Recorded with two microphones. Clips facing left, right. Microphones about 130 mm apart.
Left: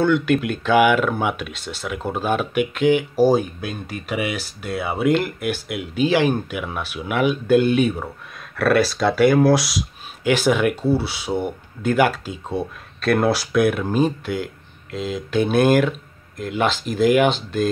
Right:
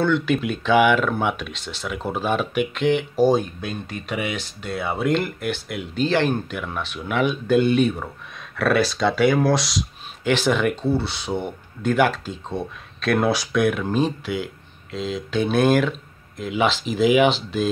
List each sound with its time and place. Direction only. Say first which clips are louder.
0.0 s speech: left 2 dB; centre (ahead or behind)